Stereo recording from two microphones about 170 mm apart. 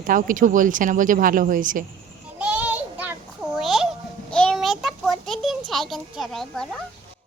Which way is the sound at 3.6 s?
Centre (ahead or behind).